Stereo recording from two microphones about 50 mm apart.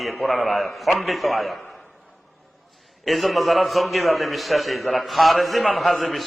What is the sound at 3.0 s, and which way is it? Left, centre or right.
A man's voice, centre.